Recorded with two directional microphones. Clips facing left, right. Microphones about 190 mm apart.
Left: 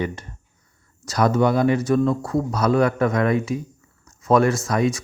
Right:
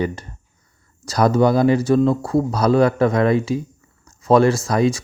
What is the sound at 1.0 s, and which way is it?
Speech, 35° right (ahead or behind).